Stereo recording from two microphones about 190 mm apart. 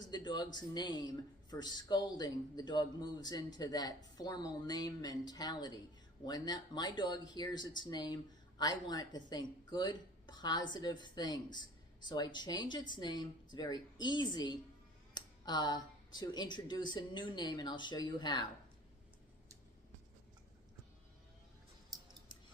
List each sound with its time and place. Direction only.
0.1 s speech: 20° left (ahead or behind)
21.9 s scissors: 20° right (ahead or behind)